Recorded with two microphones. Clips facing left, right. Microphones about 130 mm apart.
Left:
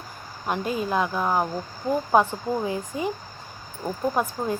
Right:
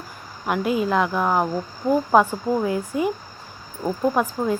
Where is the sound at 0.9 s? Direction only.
90° right.